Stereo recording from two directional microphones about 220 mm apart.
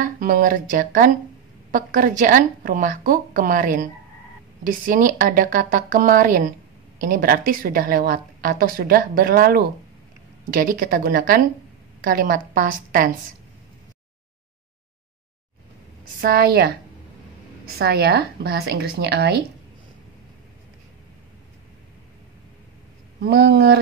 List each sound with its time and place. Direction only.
0.0 s a woman's voice: 40° right (ahead or behind)
16.2 s a woman's voice: 40° right (ahead or behind)
17.7 s a woman's voice: 45° right (ahead or behind)
23.2 s a woman's voice: 45° right (ahead or behind)